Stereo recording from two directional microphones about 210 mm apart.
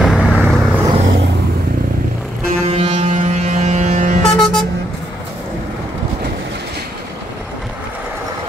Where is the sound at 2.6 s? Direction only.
25° right (ahead or behind).